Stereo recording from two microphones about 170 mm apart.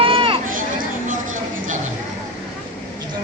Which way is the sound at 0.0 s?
30° right (ahead or behind).